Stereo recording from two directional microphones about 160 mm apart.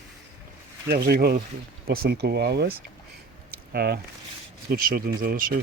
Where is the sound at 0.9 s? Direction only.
75° right (ahead or behind); by 2.8 s 90° right.